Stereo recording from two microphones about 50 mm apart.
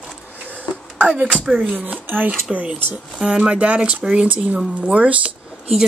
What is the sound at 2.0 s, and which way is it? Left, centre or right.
Speech, right.